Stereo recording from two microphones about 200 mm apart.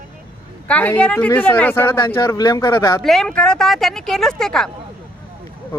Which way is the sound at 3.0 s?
5° left (ahead or behind).